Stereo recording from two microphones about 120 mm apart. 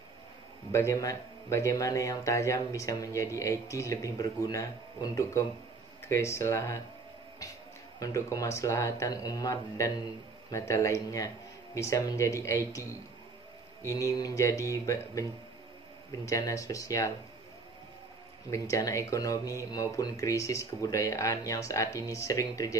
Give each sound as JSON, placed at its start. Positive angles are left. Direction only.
{"t": 0.7, "sound": "speech", "side_deg": 25}
{"t": 8.0, "sound": "speech", "side_deg": 25}
{"t": 13.9, "sound": "speech", "side_deg": 30}
{"t": 16.3, "sound": "speech", "side_deg": 25}
{"t": 18.5, "sound": "speech", "side_deg": 25}